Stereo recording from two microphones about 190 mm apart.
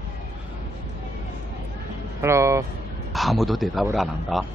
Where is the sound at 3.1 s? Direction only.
Centre (ahead or behind).